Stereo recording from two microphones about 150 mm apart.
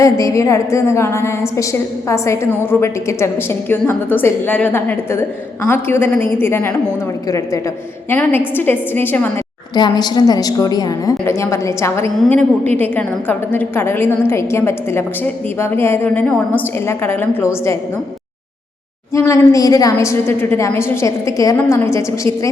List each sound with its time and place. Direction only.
0.0 s a woman's voice: 20° left (ahead or behind)
9.7 s a woman's voice: 30° left (ahead or behind)
12.1 s a woman's voice: 5° left (ahead or behind)
19.1 s a woman's voice: 20° left (ahead or behind)